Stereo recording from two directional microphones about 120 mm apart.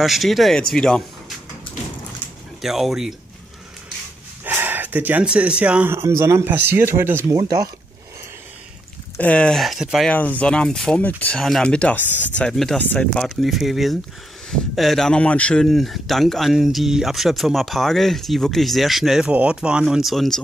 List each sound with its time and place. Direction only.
0.0 s speech: centre (ahead or behind)
2.6 s speech: centre (ahead or behind)
4.5 s speech: 15° right (ahead or behind)
7.3 s speech: 30° right (ahead or behind)
9.2 s speech: 10° left (ahead or behind)
10.0 s speech: 15° left (ahead or behind)
11.3 s speech: 5° left (ahead or behind)